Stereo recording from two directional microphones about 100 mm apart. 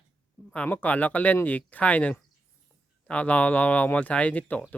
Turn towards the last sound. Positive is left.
turn(degrees=15)  # may be behind; listen again after turning